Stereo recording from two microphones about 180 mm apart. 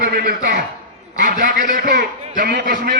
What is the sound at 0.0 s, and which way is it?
A man's voice, 55° right (ahead or behind).